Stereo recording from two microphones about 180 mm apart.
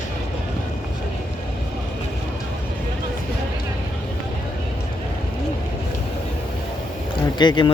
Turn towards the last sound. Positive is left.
turn(degrees=25)  # may be behind; listen again after turning